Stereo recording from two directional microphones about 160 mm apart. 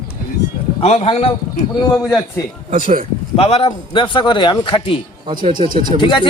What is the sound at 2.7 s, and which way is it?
Speech, 60° right (ahead or behind).